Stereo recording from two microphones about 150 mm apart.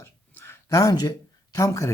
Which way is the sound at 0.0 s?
15° left (ahead or behind).